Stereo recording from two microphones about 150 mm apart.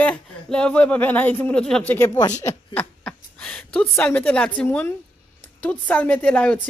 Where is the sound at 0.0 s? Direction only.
10° left (ahead or behind).